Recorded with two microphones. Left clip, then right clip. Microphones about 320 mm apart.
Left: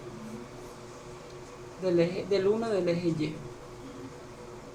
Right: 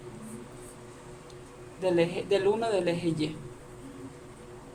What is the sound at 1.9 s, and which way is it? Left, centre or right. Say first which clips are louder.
A woman's voice: even; right.